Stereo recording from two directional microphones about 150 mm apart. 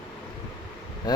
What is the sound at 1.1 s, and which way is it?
Speech, 25° left (ahead or behind).